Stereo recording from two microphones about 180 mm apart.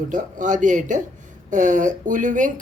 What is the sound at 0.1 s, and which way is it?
Speech, 45° right (ahead or behind).